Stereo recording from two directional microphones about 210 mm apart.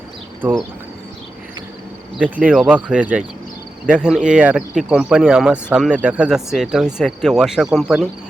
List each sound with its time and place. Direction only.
2.1 s speech: 5° right (ahead or behind)